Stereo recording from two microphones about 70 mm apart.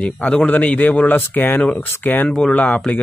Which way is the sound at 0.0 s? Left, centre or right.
Centre.